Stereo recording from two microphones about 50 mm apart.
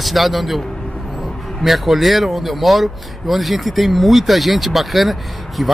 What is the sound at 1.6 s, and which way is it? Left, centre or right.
A man's voice, centre.